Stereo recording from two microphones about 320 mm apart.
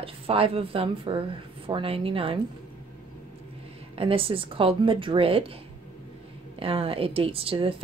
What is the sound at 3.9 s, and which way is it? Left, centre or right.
A woman's voice, centre.